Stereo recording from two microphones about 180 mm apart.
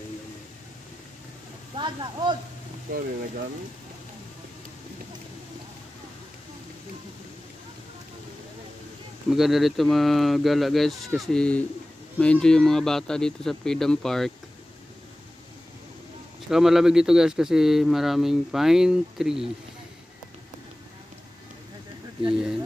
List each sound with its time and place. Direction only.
1.8 s speech: 25° right (ahead or behind)
2.9 s speech: 50° right (ahead or behind)
9.3 s speech: centre (ahead or behind)
16.4 s speech: centre (ahead or behind)